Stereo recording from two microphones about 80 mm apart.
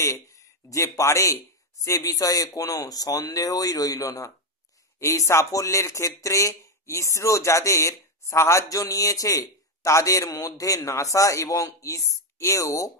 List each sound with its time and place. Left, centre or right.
0.0 s speech: left